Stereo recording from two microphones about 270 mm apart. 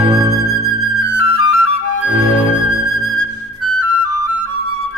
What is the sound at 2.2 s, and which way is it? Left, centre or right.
Music, left.